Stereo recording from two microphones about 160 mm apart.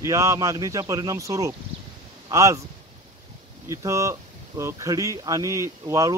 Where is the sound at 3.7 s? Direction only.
20° right (ahead or behind).